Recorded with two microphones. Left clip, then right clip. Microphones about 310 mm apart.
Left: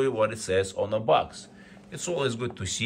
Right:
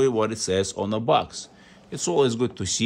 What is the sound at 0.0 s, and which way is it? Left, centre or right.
Speech, centre.